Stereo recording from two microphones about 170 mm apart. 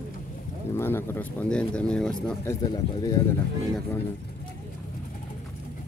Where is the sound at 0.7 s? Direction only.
15° left (ahead or behind).